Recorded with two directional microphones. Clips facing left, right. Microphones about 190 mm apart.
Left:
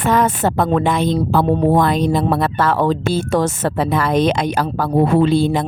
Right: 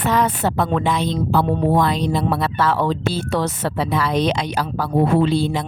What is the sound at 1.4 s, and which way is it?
Speech, 35° left (ahead or behind).